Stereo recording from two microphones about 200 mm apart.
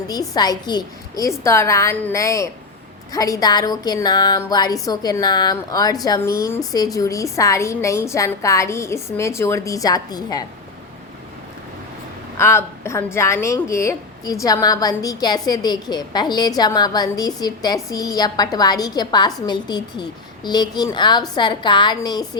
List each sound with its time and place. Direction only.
0.1 s a woman's voice: 20° left (ahead or behind)
12.4 s a woman's voice: 15° left (ahead or behind)